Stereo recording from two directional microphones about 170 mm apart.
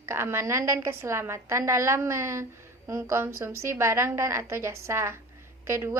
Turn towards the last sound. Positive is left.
turn(degrees=-15)  # may be behind; listen again after turning